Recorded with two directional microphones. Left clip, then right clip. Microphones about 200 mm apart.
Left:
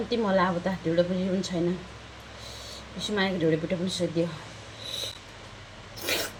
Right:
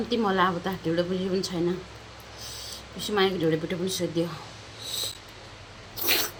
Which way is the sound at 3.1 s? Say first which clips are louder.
Right 2 dB; 10° right (ahead or behind).